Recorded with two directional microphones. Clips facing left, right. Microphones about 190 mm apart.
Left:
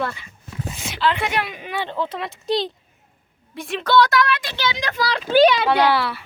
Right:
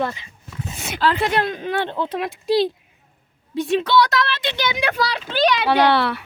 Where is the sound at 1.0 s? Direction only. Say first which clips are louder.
Right 1 dB; 40° right (ahead or behind).